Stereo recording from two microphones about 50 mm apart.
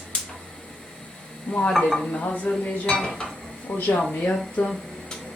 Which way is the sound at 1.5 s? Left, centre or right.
Left.